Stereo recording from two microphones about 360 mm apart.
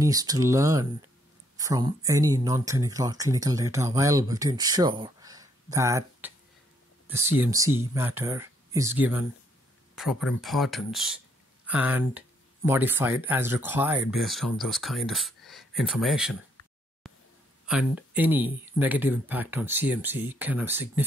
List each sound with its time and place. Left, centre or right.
0.0 s speech: centre